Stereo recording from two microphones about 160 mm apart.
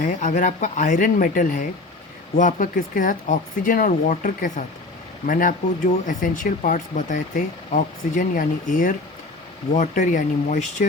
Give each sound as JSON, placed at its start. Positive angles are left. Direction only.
{"t": 0.0, "sound": "speech", "side_deg": 50}